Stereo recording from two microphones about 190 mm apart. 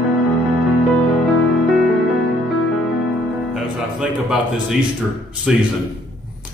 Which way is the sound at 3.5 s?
Centre (ahead or behind).